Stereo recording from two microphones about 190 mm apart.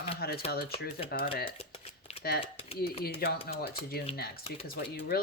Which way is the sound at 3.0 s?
55° left (ahead or behind).